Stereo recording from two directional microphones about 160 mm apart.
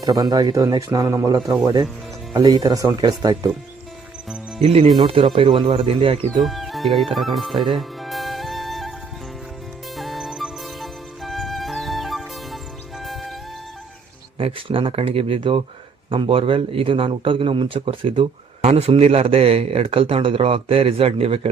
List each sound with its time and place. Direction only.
0.0 s speech: 25° right (ahead or behind)
4.6 s a man's voice: 40° right (ahead or behind)
6.4 s speech: centre (ahead or behind)
7.8 s music: centre (ahead or behind)
9.9 s music: centre (ahead or behind)
14.3 s a man's voice: 35° right (ahead or behind)